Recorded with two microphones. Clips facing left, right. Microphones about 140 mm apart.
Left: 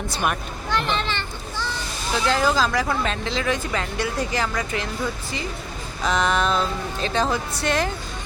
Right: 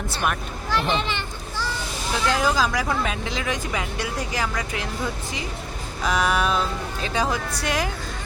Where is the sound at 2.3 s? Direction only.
10° right (ahead or behind).